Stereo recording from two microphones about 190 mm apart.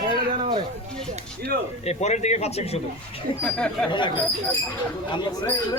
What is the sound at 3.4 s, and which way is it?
Speech, 5° left (ahead or behind).